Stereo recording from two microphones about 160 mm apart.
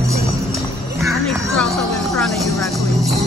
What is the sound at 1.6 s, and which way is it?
Music, centre (ahead or behind).